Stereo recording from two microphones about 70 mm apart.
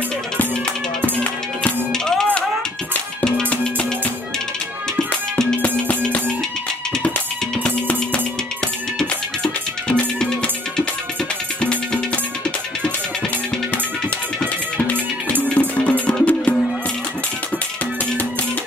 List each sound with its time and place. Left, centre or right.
1.9 s music: centre
5.6 s music: centre
7.6 s music: centre
9.4 s music: centre
11.6 s music: centre
15.5 s music: centre